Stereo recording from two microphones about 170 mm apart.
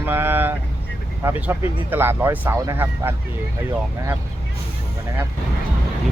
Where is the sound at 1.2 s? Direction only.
15° right (ahead or behind).